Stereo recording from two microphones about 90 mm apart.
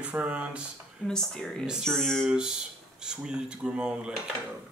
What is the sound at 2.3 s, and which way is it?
Speech, 5° right (ahead or behind).